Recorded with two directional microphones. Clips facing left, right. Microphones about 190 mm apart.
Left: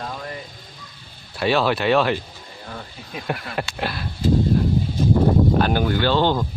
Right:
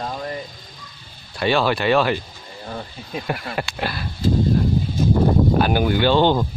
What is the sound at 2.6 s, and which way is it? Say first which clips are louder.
Speech: right 5 dB; 30° right (ahead or behind).